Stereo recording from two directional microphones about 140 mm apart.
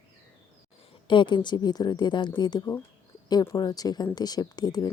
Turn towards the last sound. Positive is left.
turn(degrees=30)  # may be behind; listen again after turning